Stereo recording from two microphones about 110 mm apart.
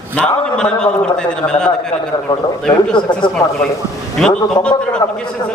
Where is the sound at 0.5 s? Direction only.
10° left (ahead or behind).